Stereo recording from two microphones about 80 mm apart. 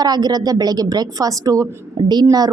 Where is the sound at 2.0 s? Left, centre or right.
Right.